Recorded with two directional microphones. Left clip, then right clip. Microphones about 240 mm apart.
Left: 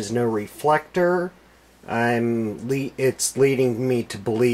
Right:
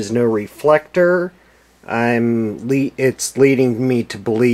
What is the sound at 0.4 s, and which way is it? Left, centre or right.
Speech, centre.